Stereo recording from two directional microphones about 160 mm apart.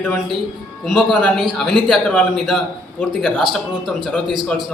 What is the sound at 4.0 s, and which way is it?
Speech, 5° left (ahead or behind).